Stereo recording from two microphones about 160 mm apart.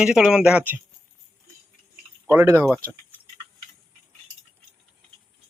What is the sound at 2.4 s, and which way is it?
Speech, 15° right (ahead or behind).